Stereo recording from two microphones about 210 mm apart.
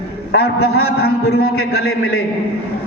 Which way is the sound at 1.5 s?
90° left.